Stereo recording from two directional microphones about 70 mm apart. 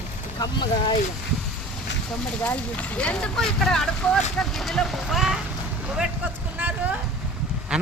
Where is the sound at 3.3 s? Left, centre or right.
Centre.